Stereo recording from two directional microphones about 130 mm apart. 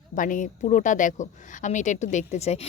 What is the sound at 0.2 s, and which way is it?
A woman's voice, 85° left.